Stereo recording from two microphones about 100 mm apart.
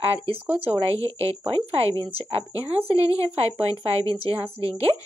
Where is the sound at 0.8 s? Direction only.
70° right (ahead or behind).